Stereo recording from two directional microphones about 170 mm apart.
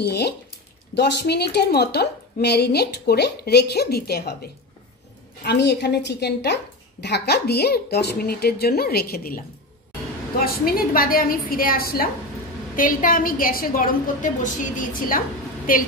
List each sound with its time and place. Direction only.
0.0 s a woman's voice: 75° left (ahead or behind)
5.4 s a woman's voice: 80° left; by 9.4 s 60° left (ahead or behind)
10.4 s a woman's voice: 60° left (ahead or behind)